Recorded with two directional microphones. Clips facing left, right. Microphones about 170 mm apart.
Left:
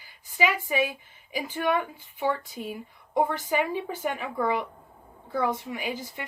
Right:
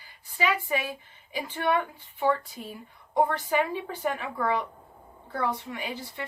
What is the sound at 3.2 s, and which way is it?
A woman's voice, 10° left (ahead or behind).